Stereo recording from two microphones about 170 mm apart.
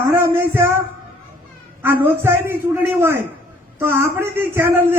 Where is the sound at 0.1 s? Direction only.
15° right (ahead or behind).